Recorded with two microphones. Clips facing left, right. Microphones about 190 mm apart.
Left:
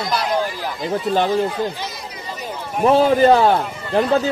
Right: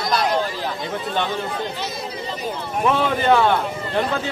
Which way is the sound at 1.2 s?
35° left (ahead or behind).